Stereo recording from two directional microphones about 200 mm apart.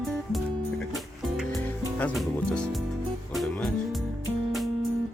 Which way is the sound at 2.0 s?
5° left (ahead or behind).